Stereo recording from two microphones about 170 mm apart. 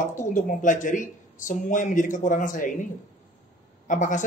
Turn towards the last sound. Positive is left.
turn(degrees=50)  # may be behind; listen again after turning